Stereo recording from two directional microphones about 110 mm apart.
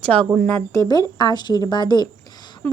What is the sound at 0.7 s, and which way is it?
A woman's voice, 35° left (ahead or behind).